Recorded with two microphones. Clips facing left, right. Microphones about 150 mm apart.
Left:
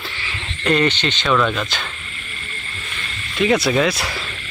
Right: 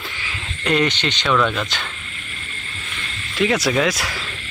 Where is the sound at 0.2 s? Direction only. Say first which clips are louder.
Left 2 dB; 10° right (ahead or behind).